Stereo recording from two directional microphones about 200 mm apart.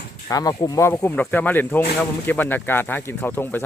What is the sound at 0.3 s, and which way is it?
Speech, 20° left (ahead or behind).